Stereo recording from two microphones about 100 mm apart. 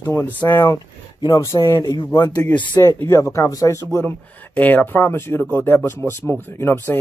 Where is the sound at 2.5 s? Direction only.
50° left (ahead or behind).